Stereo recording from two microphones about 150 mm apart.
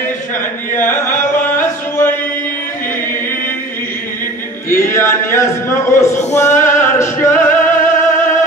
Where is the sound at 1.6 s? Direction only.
15° left (ahead or behind).